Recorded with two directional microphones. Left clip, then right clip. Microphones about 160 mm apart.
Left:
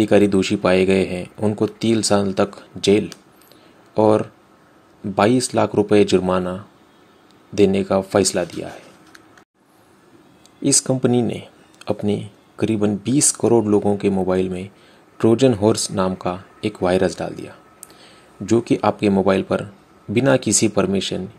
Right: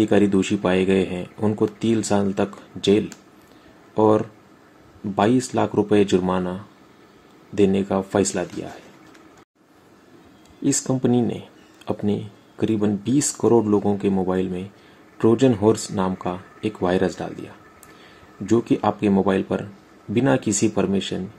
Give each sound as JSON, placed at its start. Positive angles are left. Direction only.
{"t": 0.0, "sound": "speech", "side_deg": 15}
{"t": 10.6, "sound": "speech", "side_deg": 15}